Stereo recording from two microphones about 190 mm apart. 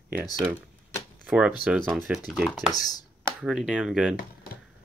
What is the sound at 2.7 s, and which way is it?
Speech, 20° left (ahead or behind).